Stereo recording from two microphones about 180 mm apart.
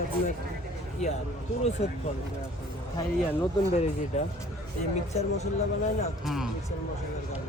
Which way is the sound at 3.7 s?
35° left (ahead or behind).